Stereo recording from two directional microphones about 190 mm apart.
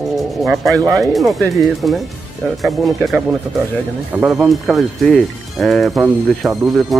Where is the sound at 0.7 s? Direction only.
15° right (ahead or behind).